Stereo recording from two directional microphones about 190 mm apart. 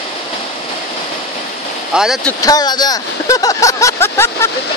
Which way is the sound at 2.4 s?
20° left (ahead or behind).